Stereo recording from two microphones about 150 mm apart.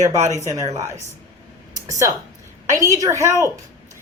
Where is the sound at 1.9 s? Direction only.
20° right (ahead or behind).